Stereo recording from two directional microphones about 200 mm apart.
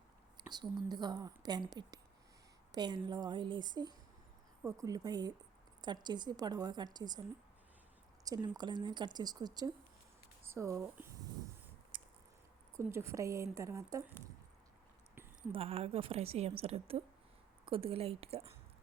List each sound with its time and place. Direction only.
0.5 s speech: 20° right (ahead or behind)
8.2 s a woman's voice: 20° right (ahead or behind)
11.9 s a sound: 25° right (ahead or behind)
12.7 s a woman's voice: 15° right (ahead or behind)
15.5 s speech: 30° right (ahead or behind)